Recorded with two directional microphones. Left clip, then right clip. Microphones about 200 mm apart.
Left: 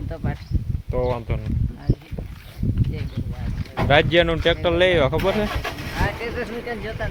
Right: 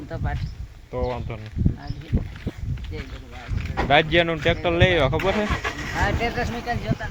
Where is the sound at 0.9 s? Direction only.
15° left (ahead or behind).